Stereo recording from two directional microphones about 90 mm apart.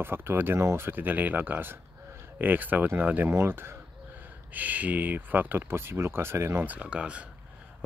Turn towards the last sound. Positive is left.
turn(degrees=-15)  # may be behind; listen again after turning